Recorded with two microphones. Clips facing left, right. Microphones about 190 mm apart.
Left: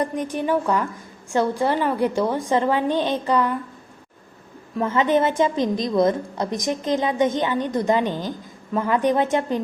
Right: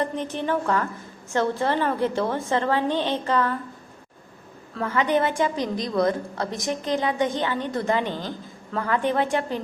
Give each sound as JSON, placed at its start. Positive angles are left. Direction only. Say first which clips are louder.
{"t": 0.0, "sound": "a woman's voice", "louder": "left 3 dB", "side_deg": 10}
{"t": 4.7, "sound": "a woman's voice", "louder": "left 3 dB", "side_deg": 20}